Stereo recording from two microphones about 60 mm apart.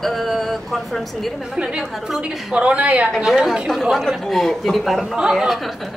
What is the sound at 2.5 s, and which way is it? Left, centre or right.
Speech, right.